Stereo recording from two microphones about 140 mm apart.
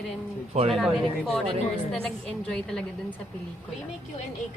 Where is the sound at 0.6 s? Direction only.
50° right (ahead or behind).